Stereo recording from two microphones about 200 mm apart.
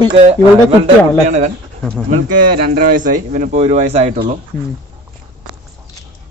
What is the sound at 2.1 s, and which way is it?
Speech, 45° right (ahead or behind).